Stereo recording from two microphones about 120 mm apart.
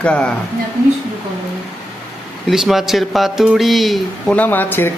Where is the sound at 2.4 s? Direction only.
Centre (ahead or behind).